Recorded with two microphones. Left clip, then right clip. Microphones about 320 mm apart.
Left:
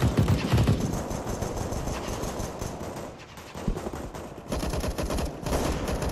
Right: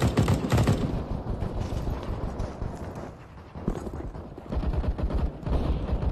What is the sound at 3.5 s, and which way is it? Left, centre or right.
Gunshot, left.